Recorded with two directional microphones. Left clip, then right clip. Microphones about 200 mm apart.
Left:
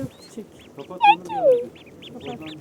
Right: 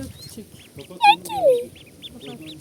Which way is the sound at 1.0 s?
50° right (ahead or behind).